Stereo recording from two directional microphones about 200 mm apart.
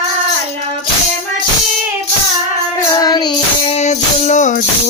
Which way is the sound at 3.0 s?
20° left (ahead or behind).